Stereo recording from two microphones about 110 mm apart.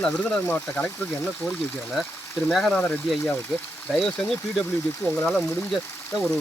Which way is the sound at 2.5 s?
5° left (ahead or behind).